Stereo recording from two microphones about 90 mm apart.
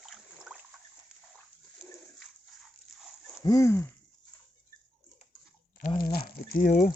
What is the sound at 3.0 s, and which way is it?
Dog, 5° right (ahead or behind).